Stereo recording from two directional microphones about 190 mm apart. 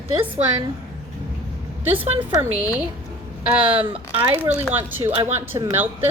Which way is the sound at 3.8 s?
30° right (ahead or behind).